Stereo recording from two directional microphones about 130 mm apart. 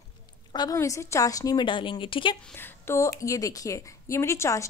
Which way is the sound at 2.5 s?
20° left (ahead or behind).